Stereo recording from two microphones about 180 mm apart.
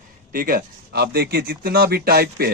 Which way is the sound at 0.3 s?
55° right (ahead or behind).